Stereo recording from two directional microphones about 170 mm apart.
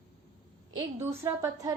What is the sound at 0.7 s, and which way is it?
Speech, 15° right (ahead or behind).